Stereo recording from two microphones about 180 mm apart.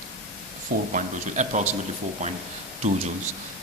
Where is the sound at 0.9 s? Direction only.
45° right (ahead or behind).